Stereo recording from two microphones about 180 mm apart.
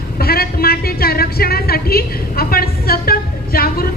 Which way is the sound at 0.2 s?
60° left (ahead or behind).